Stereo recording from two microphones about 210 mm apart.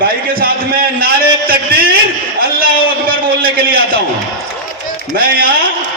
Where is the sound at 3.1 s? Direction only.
45° right (ahead or behind).